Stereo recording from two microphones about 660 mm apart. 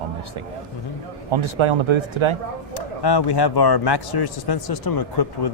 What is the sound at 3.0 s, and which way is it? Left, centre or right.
A man's voice, left.